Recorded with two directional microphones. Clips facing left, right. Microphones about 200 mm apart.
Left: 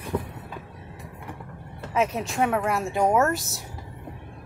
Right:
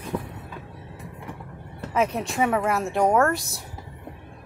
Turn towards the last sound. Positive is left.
turn(degrees=0)  # may be behind; listen again after turning